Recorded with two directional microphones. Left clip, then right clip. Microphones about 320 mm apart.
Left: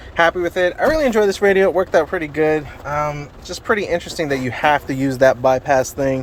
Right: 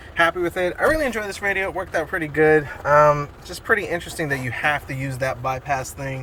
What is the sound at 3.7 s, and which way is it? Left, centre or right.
Speech, centre.